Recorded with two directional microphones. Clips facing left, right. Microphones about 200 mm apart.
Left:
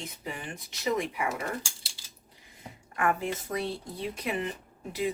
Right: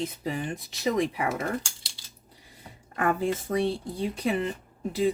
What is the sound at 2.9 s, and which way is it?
Speech, 35° right (ahead or behind).